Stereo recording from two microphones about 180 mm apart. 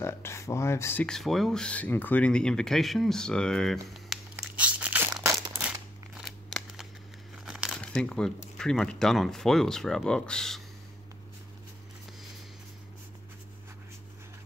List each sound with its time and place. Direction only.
0.0 s speech: 15° left (ahead or behind); by 5.1 s 10° right (ahead or behind)
5.1 s crumpling: 15° right (ahead or behind)
6.1 s scissors: centre (ahead or behind)
7.4 s crumpling: centre (ahead or behind)
7.8 s speech: 5° left (ahead or behind)